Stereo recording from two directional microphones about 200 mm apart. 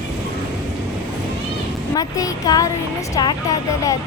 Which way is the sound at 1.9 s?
20° left (ahead or behind).